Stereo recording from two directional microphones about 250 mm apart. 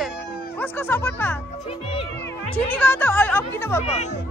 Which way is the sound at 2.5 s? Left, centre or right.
Centre.